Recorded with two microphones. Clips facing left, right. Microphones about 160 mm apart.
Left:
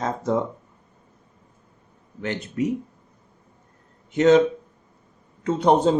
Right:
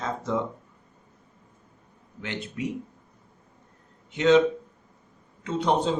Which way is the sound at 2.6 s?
45° left (ahead or behind).